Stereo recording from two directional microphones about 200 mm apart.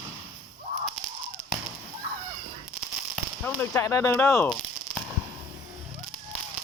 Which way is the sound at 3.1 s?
5° left (ahead or behind).